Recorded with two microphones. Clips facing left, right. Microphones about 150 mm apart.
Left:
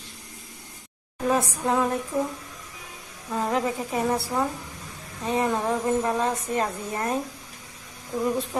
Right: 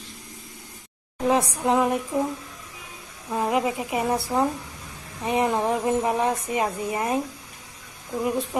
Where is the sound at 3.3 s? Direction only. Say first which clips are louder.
Right 2 dB; 10° right (ahead or behind).